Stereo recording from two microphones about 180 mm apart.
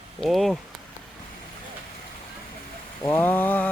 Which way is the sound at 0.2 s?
Centre (ahead or behind).